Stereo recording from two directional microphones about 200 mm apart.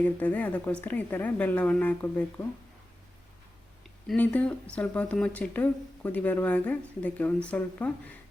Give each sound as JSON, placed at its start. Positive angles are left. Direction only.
{"t": 0.0, "sound": "speech", "side_deg": 5}
{"t": 4.1, "sound": "speech", "side_deg": 5}